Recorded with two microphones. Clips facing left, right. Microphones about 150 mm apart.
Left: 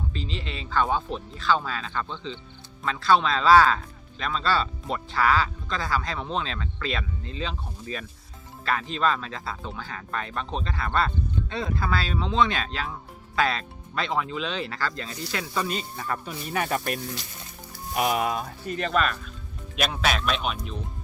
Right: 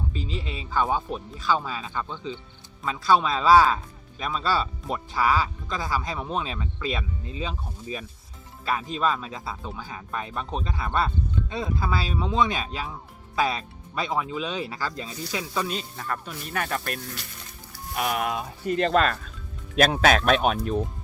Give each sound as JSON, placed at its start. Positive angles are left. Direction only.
{"t": 0.1, "sound": "speech", "side_deg": -10}
{"t": 15.5, "sound": "speech", "side_deg": 0}
{"t": 19.8, "sound": "speech", "side_deg": -45}